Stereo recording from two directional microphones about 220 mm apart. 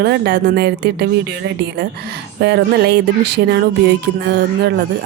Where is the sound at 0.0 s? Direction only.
50° right (ahead or behind).